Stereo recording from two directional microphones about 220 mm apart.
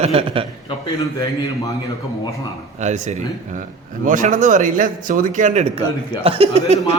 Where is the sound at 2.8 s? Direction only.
30° right (ahead or behind).